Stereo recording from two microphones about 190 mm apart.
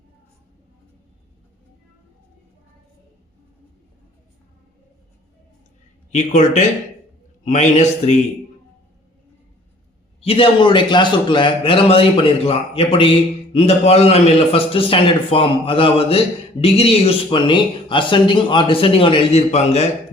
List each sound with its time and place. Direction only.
6.1 s a man's voice: 40° left (ahead or behind)
10.2 s a man's voice: 30° left (ahead or behind)